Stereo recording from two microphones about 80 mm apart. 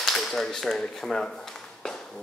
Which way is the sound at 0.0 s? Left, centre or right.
Centre.